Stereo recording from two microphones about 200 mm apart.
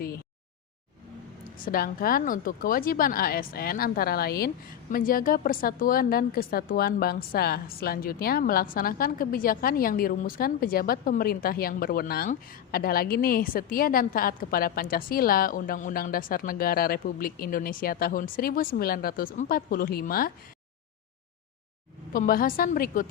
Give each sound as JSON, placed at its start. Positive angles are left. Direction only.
{"t": 1.5, "sound": "a woman's voice", "side_deg": 45}
{"t": 22.1, "sound": "a woman's voice", "side_deg": 45}